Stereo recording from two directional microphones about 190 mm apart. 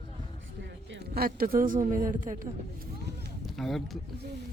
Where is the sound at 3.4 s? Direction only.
Centre (ahead or behind).